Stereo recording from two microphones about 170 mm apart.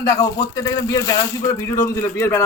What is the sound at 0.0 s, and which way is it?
A man's voice, 20° left (ahead or behind).